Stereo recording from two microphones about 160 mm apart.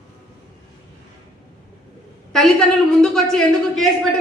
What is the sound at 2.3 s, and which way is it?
A man's voice, 5° left (ahead or behind).